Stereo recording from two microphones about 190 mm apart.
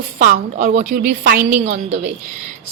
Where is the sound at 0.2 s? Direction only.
45° right (ahead or behind).